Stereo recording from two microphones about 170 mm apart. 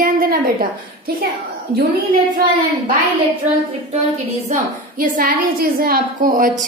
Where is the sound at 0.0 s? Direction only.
60° right (ahead or behind).